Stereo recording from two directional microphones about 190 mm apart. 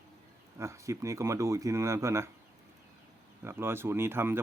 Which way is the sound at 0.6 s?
15° right (ahead or behind).